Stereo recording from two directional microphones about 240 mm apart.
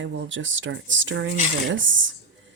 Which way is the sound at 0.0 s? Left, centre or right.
Right.